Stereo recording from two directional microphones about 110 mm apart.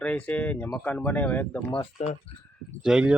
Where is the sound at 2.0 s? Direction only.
65° left (ahead or behind).